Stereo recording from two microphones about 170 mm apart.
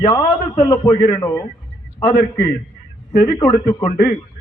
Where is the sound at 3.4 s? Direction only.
20° left (ahead or behind).